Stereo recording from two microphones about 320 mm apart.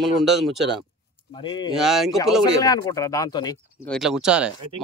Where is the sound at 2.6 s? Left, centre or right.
Centre.